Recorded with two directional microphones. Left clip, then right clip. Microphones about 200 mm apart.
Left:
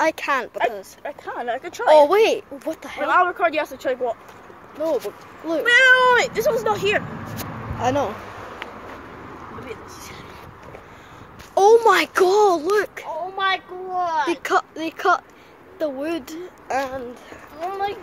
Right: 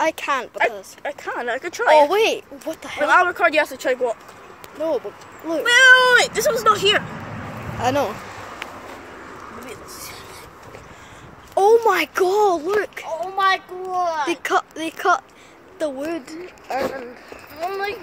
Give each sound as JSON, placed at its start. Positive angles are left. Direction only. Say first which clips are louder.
{"t": 0.0, "sound": "a child's voice", "louder": "even", "side_deg": 10}
{"t": 1.0, "sound": "speech", "louder": "right 3 dB", "side_deg": -35}
{"t": 2.0, "sound": "a child's voice", "louder": "left 2 dB", "side_deg": 15}
{"t": 2.8, "sound": "speech", "louder": "right 8 dB", "side_deg": -5}
{"t": 3.1, "sound": "speech", "louder": "right 2 dB", "side_deg": -50}
{"t": 4.8, "sound": "speech", "louder": "even", "side_deg": 0}
{"t": 5.6, "sound": "speech", "louder": "right 2 dB", "side_deg": -35}
{"t": 7.8, "sound": "speech", "louder": "right 1 dB", "side_deg": 0}
{"t": 11.5, "sound": "a child's voice", "louder": "left 1 dB", "side_deg": 5}
{"t": 13.0, "sound": "a child's voice", "louder": "right 3 dB", "side_deg": -35}
{"t": 14.3, "sound": "speech", "louder": "even", "side_deg": 5}
{"t": 17.6, "sound": "speech", "louder": "even", "side_deg": -45}